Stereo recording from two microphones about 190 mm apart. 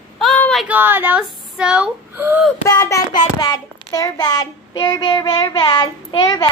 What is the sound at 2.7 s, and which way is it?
Child singing, 20° left (ahead or behind).